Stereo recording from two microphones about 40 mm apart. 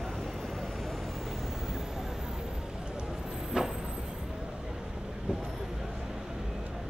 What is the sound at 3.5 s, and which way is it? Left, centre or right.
Vehicle, right.